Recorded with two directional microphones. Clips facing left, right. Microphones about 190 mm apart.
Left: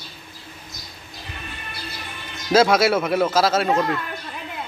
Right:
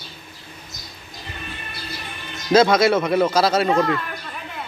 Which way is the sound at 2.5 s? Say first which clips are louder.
Right 1 dB; 5° left (ahead or behind).